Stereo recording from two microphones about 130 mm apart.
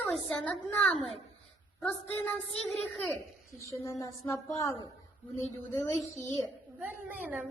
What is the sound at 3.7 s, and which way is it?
Speech, 25° left (ahead or behind).